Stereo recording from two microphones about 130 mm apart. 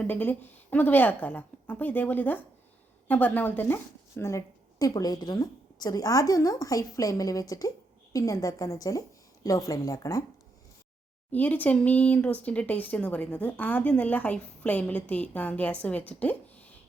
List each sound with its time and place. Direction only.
0.0 s a woman's voice: 10° left (ahead or behind)
11.3 s speech: 10° left (ahead or behind)